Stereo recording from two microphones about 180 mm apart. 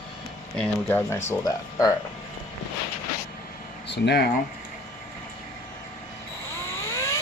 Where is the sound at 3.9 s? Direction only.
65° left (ahead or behind).